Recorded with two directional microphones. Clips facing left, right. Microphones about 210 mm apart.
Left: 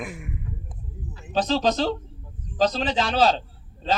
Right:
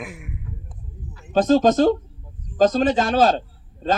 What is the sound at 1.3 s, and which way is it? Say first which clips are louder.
A man's voice: right 7 dB; 50° right (ahead or behind).